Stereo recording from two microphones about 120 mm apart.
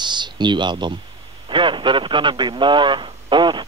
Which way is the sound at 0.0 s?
40° right (ahead or behind).